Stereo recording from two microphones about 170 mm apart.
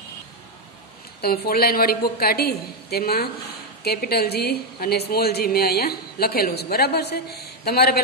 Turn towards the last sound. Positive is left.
turn(degrees=70)  # may be behind; listen again after turning